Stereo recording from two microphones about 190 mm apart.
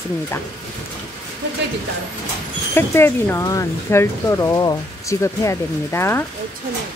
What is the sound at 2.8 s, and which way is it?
Speech, 10° left (ahead or behind).